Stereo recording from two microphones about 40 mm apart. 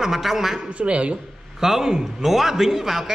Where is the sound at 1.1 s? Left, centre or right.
Centre.